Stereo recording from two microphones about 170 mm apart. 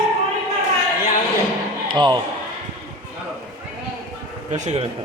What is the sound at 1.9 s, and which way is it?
Speech, 25° right (ahead or behind).